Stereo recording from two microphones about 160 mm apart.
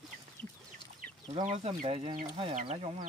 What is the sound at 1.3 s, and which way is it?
Speech, 45° right (ahead or behind).